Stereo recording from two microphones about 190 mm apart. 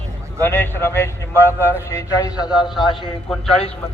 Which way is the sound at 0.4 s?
10° left (ahead or behind).